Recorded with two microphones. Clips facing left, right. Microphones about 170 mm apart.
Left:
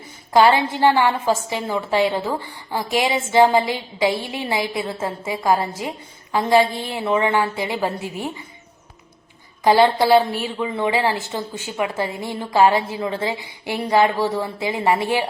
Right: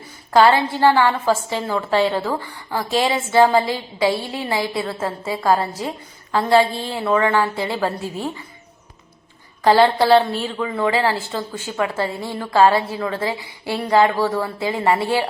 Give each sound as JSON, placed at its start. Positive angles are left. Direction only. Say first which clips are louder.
{"t": 0.3, "sound": "a woman's voice", "louder": "right 1 dB", "side_deg": 15}
{"t": 9.6, "sound": "a woman's voice", "louder": "right 1 dB", "side_deg": 15}